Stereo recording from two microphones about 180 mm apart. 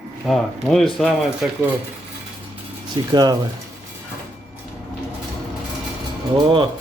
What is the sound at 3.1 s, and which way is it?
Speech, 20° right (ahead or behind).